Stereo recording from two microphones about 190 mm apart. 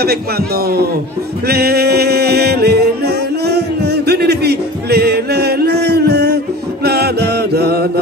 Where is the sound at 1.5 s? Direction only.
55° right (ahead or behind).